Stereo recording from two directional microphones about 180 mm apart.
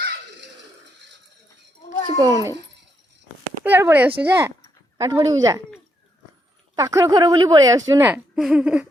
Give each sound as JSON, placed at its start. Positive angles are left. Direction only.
{"t": 2.1, "sound": "speech", "side_deg": -20}
{"t": 3.6, "sound": "speech", "side_deg": -10}
{"t": 6.7, "sound": "speech", "side_deg": -20}
{"t": 8.1, "sound": "speech", "side_deg": -5}